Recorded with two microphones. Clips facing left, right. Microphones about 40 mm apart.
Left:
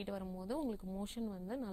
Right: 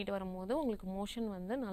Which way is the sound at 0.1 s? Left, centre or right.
Right.